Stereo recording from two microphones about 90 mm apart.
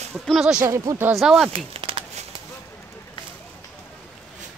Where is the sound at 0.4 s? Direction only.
10° right (ahead or behind).